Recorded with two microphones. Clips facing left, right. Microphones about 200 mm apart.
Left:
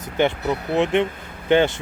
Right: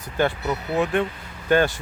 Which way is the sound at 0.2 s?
20° left (ahead or behind).